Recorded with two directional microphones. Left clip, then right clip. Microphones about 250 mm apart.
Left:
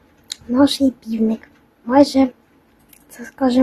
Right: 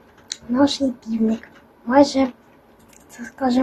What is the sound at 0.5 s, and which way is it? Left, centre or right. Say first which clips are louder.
A woman's voice: left 3 dB; centre.